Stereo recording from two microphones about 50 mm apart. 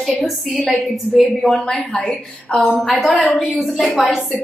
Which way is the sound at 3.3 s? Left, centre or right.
Centre.